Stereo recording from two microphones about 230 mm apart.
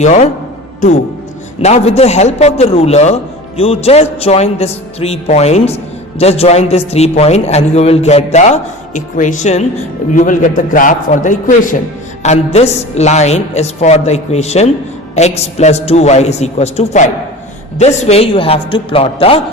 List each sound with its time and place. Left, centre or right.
0.0 s a man's voice: left
1.6 s a man's voice: left